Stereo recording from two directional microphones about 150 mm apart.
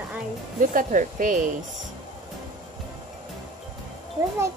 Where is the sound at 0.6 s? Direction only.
60° right (ahead or behind).